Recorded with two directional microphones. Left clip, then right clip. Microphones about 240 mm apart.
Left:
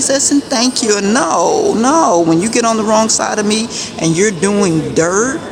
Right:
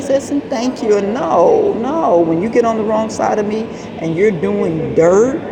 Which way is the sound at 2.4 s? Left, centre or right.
Centre.